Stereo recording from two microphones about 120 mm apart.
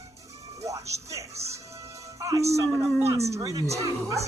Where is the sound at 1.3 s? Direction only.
65° right (ahead or behind).